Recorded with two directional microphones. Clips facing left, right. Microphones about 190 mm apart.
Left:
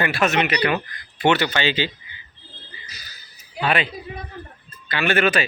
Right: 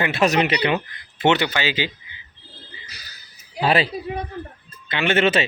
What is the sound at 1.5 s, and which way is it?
Speech, 10° right (ahead or behind).